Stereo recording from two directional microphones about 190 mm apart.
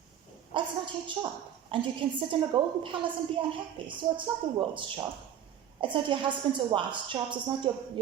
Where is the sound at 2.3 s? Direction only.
25° right (ahead or behind).